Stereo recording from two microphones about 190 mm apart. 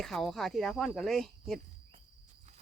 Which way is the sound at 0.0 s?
Centre (ahead or behind).